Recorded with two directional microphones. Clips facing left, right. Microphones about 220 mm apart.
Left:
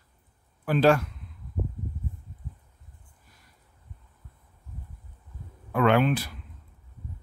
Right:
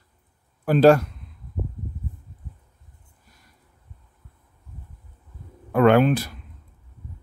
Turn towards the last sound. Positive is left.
turn(degrees=-45)  # may be behind; listen again after turning